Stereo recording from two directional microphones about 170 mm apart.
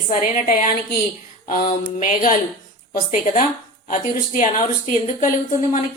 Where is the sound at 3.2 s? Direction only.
40° left (ahead or behind).